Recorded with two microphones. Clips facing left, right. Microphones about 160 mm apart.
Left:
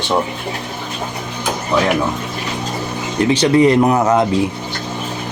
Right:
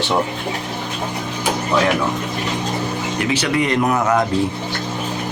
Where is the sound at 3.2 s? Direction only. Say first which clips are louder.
Left 8 dB; 30° left (ahead or behind).